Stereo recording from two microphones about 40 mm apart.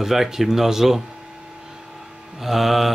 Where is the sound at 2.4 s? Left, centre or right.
Centre.